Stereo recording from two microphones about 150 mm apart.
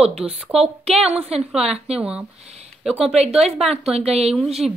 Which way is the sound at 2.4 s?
45° right (ahead or behind).